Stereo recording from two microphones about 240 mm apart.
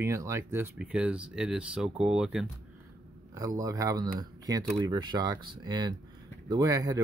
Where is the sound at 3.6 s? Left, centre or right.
Centre.